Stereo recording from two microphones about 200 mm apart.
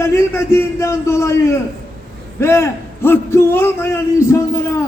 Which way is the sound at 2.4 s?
15° left (ahead or behind).